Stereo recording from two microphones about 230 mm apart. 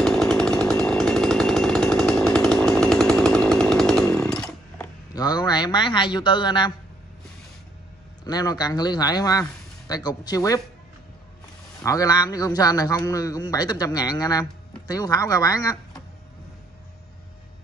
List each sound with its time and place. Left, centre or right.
0.0 s chainsaw: centre
5.1 s a sound: centre
8.2 s a man's voice: centre
11.8 s a man's voice: centre